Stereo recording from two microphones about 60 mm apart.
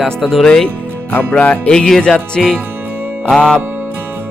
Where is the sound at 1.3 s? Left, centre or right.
Left.